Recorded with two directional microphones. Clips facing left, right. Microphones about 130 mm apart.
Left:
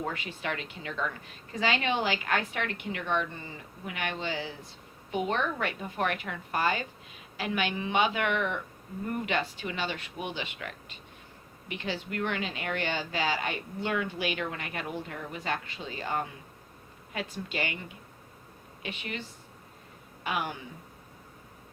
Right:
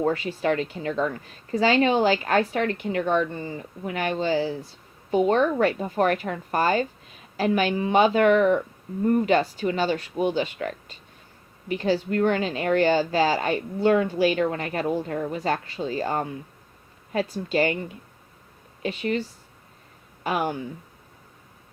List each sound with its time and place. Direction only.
0.0 s speech: 35° right (ahead or behind)
18.8 s speech: 35° right (ahead or behind)
20.2 s speech: 40° right (ahead or behind)